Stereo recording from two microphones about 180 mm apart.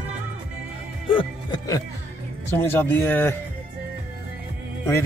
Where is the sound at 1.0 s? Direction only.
25° left (ahead or behind).